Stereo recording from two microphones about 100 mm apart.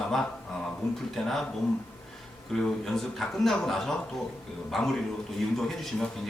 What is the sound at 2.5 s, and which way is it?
Speech, 5° left (ahead or behind).